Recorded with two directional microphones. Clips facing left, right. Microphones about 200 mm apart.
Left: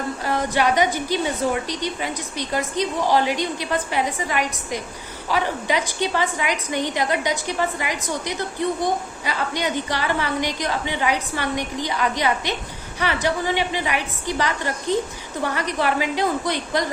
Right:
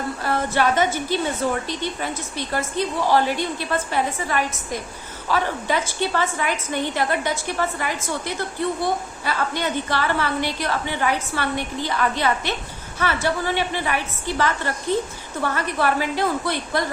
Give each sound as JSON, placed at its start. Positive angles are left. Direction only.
{"t": 0.3, "sound": "a woman's voice", "side_deg": 15}